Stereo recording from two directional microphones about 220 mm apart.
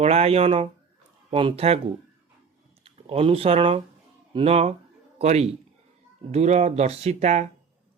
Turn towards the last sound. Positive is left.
turn(degrees=-30)  # may be behind; listen again after turning